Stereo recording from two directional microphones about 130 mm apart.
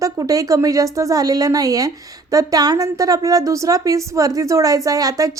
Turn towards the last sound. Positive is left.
turn(degrees=-25)  # may be behind; listen again after turning